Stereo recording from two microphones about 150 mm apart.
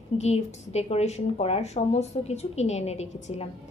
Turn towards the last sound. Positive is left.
turn(degrees=45)  # may be behind; listen again after turning